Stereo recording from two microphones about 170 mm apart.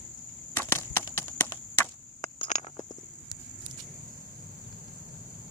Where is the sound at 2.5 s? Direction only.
45° left (ahead or behind).